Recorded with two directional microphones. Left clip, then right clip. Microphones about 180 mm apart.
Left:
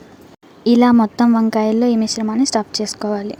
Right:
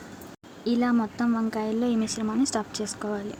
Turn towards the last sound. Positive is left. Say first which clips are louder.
# left 10 dB
turn(degrees=30)  # may be behind; listen again after turning